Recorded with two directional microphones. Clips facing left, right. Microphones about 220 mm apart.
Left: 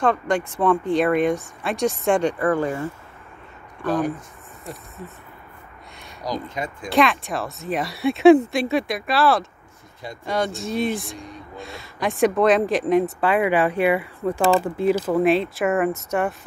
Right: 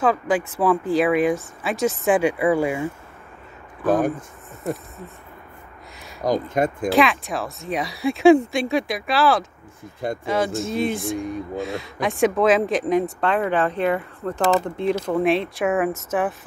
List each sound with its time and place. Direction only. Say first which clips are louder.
0.0 s speech: right 1 dB; 5° right (ahead or behind)
6.2 s speech: right 7 dB; 50° right (ahead or behind)
6.9 s speech: left 4 dB; centre (ahead or behind)